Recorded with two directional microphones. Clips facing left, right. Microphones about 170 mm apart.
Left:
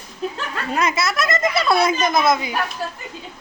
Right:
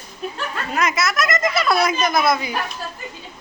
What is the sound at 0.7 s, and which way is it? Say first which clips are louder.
Speech: left 1 dB; 30° left (ahead or behind).